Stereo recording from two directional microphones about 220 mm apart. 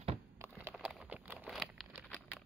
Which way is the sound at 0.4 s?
10° right (ahead or behind).